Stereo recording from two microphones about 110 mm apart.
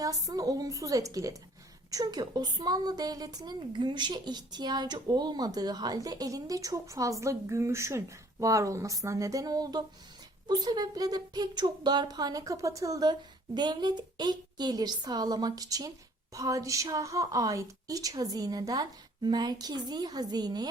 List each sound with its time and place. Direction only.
0.0 s a woman's voice: 35° right (ahead or behind)